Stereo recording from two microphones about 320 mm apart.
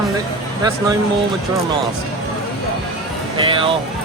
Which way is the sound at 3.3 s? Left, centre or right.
Centre.